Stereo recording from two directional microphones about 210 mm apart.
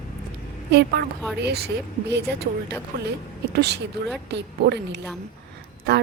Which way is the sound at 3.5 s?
55° right (ahead or behind).